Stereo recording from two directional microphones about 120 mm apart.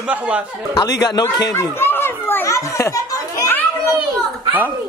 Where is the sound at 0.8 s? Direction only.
30° left (ahead or behind).